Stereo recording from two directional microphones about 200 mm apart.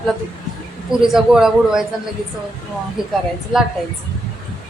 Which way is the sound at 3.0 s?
Centre (ahead or behind).